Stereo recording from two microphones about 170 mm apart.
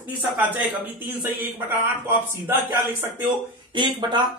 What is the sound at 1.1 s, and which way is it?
Speech, 10° right (ahead or behind).